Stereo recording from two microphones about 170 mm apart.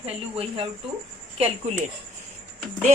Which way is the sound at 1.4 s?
40° right (ahead or behind).